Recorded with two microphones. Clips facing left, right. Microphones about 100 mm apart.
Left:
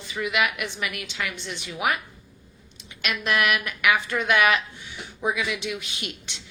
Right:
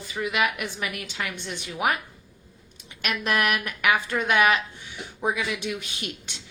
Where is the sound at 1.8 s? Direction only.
40° right (ahead or behind).